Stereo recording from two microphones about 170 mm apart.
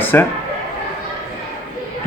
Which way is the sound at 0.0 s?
10° left (ahead or behind).